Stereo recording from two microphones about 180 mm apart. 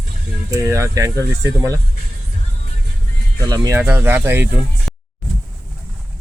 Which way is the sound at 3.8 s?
10° right (ahead or behind).